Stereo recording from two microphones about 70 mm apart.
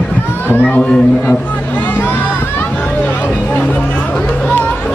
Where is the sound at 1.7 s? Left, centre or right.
Left.